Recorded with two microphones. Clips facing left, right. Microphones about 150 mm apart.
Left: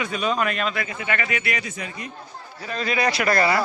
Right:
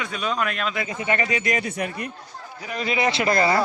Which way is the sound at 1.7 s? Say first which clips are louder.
Right 5 dB; 60° right (ahead or behind).